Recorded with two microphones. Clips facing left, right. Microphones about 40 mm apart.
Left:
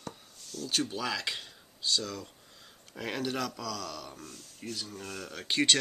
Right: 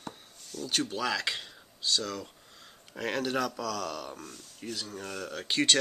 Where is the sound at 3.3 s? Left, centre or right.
Centre.